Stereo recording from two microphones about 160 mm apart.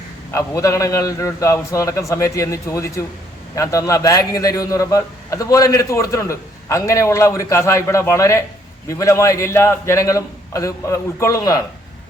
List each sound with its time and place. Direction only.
0.3 s a man's voice: 20° left (ahead or behind)